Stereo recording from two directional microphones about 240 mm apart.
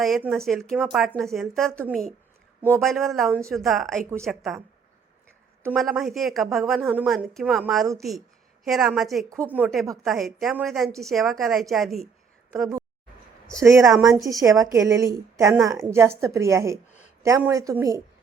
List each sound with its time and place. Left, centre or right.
0.0 s a woman's voice: centre
5.6 s a woman's voice: centre
13.6 s a woman's voice: centre